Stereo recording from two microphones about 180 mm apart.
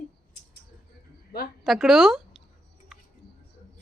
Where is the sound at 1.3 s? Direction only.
60° left (ahead or behind).